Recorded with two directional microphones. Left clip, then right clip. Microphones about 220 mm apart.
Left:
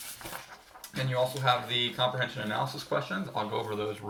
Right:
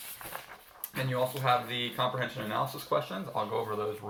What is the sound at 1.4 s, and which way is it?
Speech, 5° left (ahead or behind).